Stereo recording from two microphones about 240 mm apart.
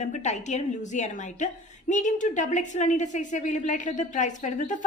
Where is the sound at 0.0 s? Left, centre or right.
Left.